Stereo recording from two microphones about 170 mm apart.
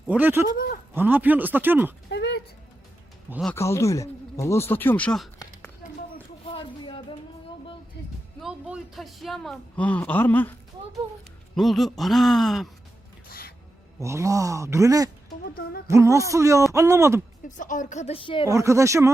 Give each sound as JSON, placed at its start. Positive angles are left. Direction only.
{"t": 0.1, "sound": "speech", "side_deg": -10}
{"t": 0.4, "sound": "speech", "side_deg": 55}
{"t": 0.9, "sound": "speech", "side_deg": -10}
{"t": 2.0, "sound": "a sound", "side_deg": 75}
{"t": 3.5, "sound": "speech", "side_deg": 15}
{"t": 6.5, "sound": "a sound", "side_deg": 30}
{"t": 8.4, "sound": "speech", "side_deg": -5}
{"t": 11.5, "sound": "speech", "side_deg": 0}
{"t": 14.0, "sound": "speech", "side_deg": -15}
{"t": 15.4, "sound": "speech", "side_deg": 60}
{"t": 15.9, "sound": "speech", "side_deg": -15}
{"t": 17.4, "sound": "speech", "side_deg": 50}
{"t": 18.4, "sound": "speech", "side_deg": -15}